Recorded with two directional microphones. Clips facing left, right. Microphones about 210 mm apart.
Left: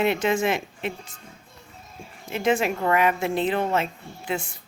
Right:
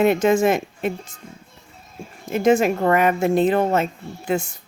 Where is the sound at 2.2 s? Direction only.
45° right (ahead or behind).